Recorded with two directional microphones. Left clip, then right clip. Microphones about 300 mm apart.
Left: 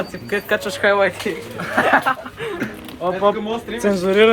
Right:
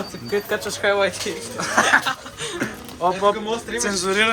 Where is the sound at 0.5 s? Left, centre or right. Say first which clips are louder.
Left 5 dB; left.